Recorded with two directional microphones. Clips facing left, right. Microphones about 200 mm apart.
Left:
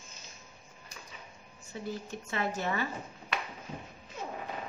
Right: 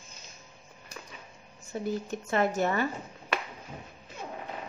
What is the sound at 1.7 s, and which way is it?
Speech, 50° right (ahead or behind).